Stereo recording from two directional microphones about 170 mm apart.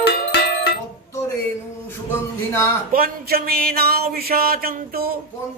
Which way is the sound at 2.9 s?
60° right (ahead or behind).